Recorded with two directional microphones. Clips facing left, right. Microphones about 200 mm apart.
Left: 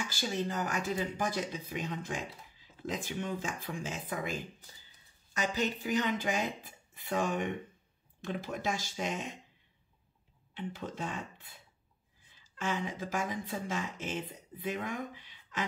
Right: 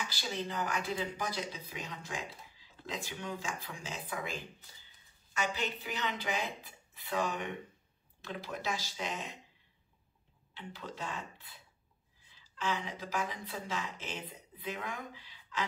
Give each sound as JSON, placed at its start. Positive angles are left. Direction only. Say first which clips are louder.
{"t": 0.0, "sound": "speech", "louder": "left 4 dB", "side_deg": 45}
{"t": 3.0, "sound": "speech", "louder": "left 3 dB", "side_deg": 50}
{"t": 10.5, "sound": "speech", "louder": "left 6 dB", "side_deg": 50}